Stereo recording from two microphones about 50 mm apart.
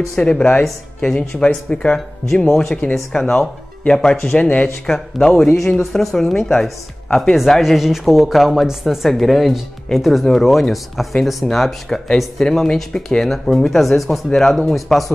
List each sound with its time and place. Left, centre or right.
0.1 s speech: centre
2.3 s speech: centre
7.6 s speech: centre